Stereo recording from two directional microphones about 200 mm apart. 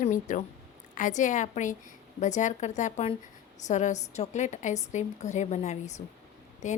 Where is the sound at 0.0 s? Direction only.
40° left (ahead or behind).